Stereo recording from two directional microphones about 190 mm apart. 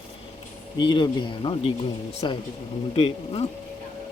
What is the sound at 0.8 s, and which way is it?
Speech, 25° left (ahead or behind).